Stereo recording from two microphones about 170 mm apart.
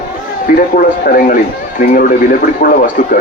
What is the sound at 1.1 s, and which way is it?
Speech, 50° left (ahead or behind).